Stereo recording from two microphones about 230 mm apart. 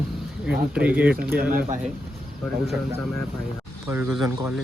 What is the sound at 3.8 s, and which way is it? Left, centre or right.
Speech, centre.